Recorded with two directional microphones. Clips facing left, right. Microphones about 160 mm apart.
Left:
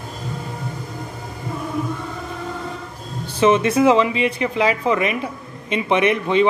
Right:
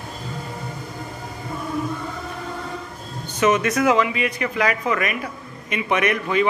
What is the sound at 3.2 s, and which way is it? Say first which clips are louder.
Speech: left 3 dB; 30° left (ahead or behind).